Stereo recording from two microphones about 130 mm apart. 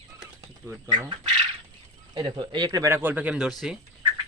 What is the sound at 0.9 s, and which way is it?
Speech, 35° right (ahead or behind).